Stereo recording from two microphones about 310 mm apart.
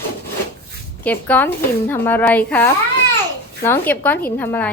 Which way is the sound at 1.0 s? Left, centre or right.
Centre.